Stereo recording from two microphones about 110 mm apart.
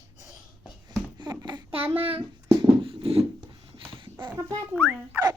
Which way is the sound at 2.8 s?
60° right (ahead or behind).